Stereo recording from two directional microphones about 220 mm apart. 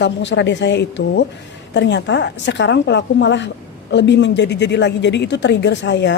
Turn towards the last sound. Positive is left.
turn(degrees=55)  # may be behind; listen again after turning